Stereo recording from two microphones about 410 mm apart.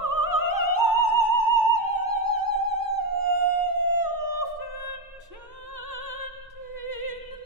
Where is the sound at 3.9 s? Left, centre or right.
Right.